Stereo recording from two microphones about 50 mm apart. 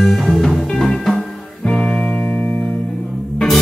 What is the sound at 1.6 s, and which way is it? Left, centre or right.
Music, left.